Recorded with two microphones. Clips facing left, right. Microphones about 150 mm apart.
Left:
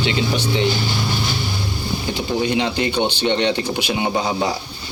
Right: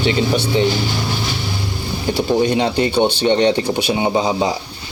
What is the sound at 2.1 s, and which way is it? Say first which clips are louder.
Speech: right 5 dB; 35° right (ahead or behind).